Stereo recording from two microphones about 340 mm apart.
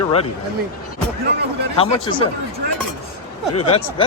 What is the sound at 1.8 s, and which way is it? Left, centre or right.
Speech, centre.